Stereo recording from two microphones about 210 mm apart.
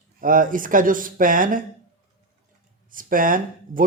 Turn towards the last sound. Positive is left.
turn(degrees=-40)  # may be behind; listen again after turning